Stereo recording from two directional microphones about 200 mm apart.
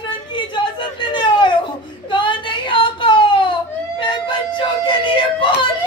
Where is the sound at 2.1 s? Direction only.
25° left (ahead or behind).